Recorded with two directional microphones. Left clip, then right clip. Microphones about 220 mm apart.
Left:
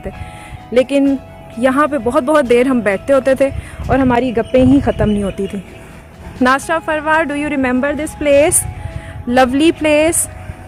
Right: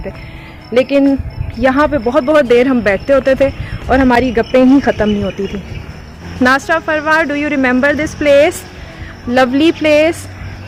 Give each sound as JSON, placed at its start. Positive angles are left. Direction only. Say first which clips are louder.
{"t": 0.7, "sound": "speech", "louder": "right 2 dB", "side_deg": 25}